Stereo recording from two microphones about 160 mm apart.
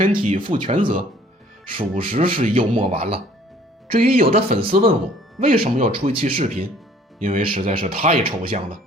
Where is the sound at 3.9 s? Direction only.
65° right (ahead or behind).